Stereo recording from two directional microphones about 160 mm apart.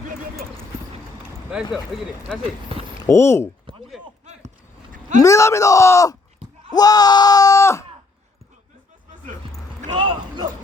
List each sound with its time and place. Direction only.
1.7 s speech: centre (ahead or behind)
3.0 s speech: 15° left (ahead or behind)
4.3 s a sound: 45° right (ahead or behind)
5.2 s speech: 20° left (ahead or behind)
9.9 s bow-wow: 30° right (ahead or behind)